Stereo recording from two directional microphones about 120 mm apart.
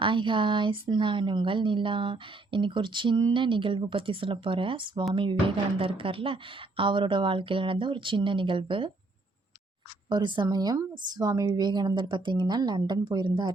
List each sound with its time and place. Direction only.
0.0 s speech: 45° right (ahead or behind)
10.1 s a woman's voice: 40° right (ahead or behind)